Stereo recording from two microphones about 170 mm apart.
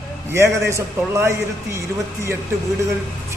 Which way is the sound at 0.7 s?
15° right (ahead or behind).